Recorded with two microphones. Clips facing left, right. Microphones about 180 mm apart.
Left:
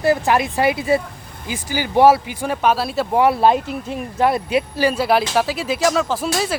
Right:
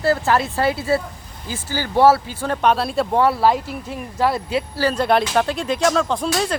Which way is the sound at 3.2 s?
20° left (ahead or behind).